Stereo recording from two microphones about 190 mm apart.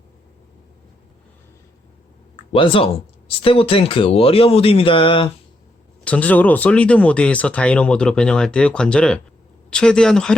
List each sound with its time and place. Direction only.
2.3 s speech: 30° left (ahead or behind)
6.1 s speech: 10° left (ahead or behind)